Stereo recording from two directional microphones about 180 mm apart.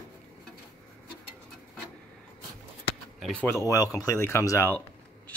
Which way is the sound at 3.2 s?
5° left (ahead or behind).